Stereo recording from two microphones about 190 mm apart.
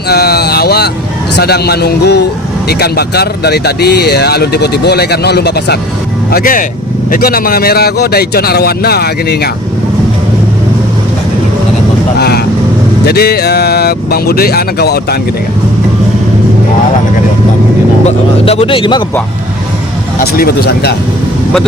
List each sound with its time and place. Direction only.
0.1 s speech: 55° left (ahead or behind)
6.3 s speech: 45° left (ahead or behind)
12.2 s vehicle: 55° left (ahead or behind)
13.1 s speech: 55° left (ahead or behind)
18.0 s speech: 30° left (ahead or behind)
20.2 s speech: 55° left (ahead or behind)